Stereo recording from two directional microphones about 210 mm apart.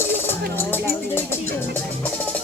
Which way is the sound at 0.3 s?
10° left (ahead or behind).